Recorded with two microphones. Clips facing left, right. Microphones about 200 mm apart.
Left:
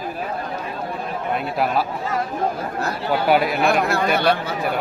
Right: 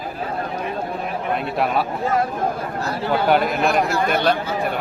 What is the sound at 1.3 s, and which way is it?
Speech, centre (ahead or behind).